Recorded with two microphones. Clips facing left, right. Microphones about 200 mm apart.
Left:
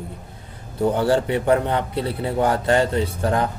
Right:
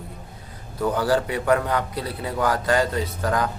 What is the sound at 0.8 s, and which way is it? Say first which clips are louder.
Speech: left 3 dB; 25° left (ahead or behind).